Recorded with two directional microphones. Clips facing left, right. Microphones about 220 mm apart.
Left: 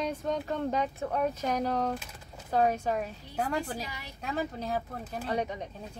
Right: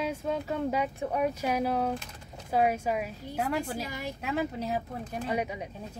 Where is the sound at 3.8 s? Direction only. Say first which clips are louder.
Right 5 dB; 50° right (ahead or behind).